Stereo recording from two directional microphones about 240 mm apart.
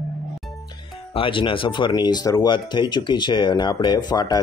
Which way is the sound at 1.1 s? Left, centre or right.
Left.